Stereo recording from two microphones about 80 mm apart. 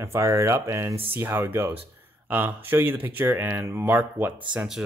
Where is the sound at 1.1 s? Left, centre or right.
Right.